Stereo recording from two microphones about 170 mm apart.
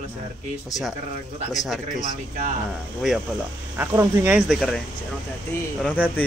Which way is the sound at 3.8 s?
15° right (ahead or behind).